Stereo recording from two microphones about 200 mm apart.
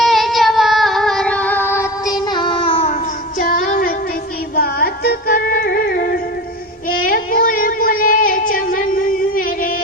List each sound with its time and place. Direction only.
0.0 s music: centre (ahead or behind); by 2.9 s 25° left (ahead or behind)
3.7 s child singing: 45° left (ahead or behind)
4.5 s music: 50° left (ahead or behind)
7.0 s a sound: 45° left (ahead or behind)